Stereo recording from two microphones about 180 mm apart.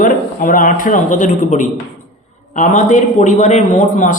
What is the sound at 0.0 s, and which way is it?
A man's voice, 50° left (ahead or behind).